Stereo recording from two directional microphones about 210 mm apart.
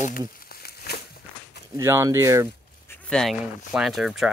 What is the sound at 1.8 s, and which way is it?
Speech, 15° right (ahead or behind).